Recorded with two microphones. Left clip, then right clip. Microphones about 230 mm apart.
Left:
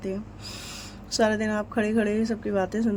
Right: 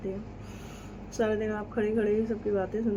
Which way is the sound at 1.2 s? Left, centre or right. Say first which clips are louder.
Left 5 dB; left.